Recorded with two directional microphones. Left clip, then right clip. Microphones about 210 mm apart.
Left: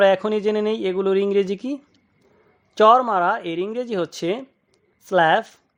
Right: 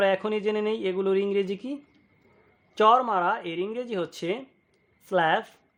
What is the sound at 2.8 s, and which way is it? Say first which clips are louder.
Speech: left 6 dB; 25° left (ahead or behind).